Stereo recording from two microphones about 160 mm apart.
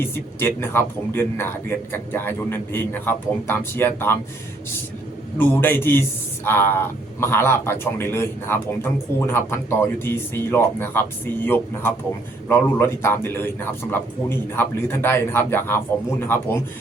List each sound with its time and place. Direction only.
0.0 s a man's voice: 15° left (ahead or behind)
5.4 s a man's voice: 10° left (ahead or behind)